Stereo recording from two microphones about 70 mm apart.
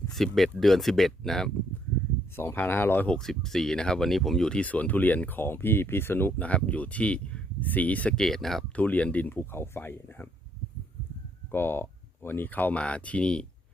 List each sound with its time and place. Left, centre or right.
0.1 s speech: centre
2.3 s speech: left
3.1 s speech: centre; by 6.5 s left
6.5 s speech: centre
8.1 s speech: centre
8.7 s speech: left
9.3 s speech: left
11.5 s speech: left; by 13.4 s centre